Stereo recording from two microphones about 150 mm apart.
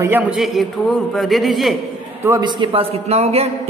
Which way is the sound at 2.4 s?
35° right (ahead or behind).